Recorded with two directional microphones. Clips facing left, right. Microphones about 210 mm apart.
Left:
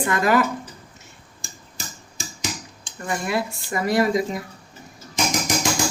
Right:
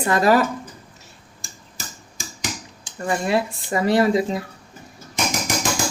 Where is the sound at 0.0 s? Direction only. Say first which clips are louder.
Right 2 dB; 35° right (ahead or behind).